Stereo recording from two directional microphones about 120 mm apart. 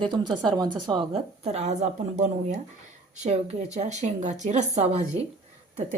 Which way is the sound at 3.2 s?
65° right (ahead or behind).